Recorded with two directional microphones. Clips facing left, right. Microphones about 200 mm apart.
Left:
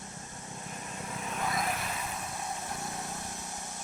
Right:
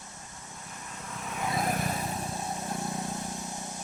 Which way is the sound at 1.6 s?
40° right (ahead or behind).